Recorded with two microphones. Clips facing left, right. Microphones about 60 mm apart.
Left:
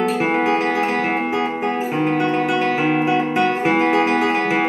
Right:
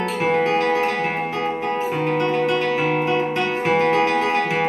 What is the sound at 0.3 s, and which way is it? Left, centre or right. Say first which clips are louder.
Music: even; centre.